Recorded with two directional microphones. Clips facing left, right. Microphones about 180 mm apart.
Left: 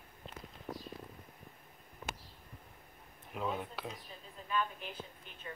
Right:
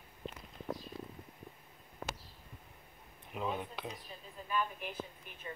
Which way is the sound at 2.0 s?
70° right (ahead or behind).